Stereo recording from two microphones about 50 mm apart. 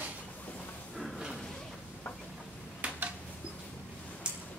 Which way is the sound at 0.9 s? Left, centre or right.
Centre.